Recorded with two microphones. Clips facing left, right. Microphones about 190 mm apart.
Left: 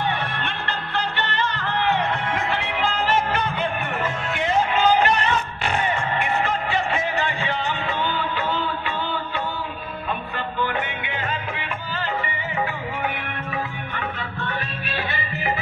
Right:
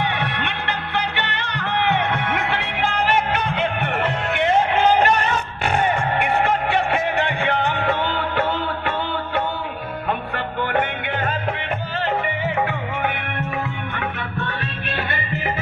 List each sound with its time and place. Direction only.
0.0 s music: 65° right (ahead or behind)
13.9 s music: 60° right (ahead or behind)